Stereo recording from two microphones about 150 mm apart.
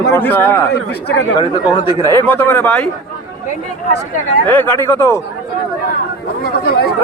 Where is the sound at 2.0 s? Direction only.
15° left (ahead or behind).